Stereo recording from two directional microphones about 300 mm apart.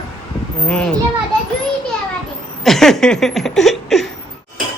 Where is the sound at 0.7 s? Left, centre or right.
Centre.